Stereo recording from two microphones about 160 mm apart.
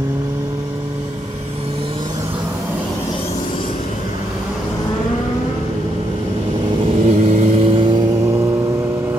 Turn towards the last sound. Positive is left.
turn(degrees=-35)  # may be behind; listen again after turning